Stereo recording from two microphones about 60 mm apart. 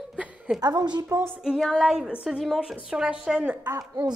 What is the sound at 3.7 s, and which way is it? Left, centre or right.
Speech, right.